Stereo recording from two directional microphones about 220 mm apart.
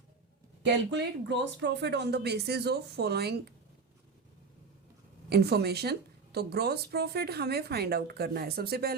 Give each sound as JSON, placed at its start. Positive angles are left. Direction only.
{"t": 0.6, "sound": "a woman's voice", "side_deg": -50}
{"t": 5.3, "sound": "a woman's voice", "side_deg": -45}